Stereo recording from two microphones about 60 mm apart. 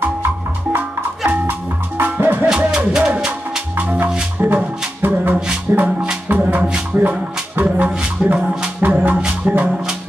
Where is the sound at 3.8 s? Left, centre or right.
Right.